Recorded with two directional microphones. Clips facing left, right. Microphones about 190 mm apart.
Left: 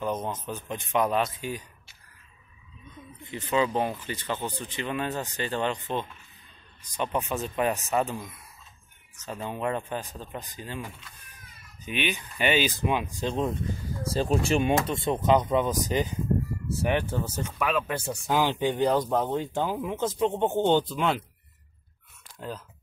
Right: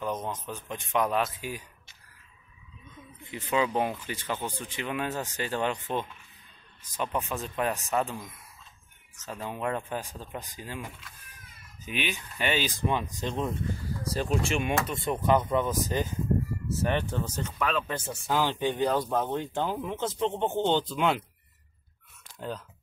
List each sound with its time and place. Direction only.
0.0 s speech: centre (ahead or behind)
3.3 s speech: 10° right (ahead or behind); by 13.5 s 10° left (ahead or behind)
14.0 s speech: 30° left (ahead or behind)
14.8 s speech: 20° left (ahead or behind)
20.9 s speech: centre (ahead or behind)